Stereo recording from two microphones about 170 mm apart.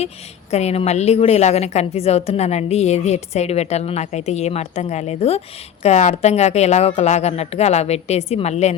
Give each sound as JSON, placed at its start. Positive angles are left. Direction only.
{"t": 0.5, "sound": "a woman's voice", "side_deg": 40}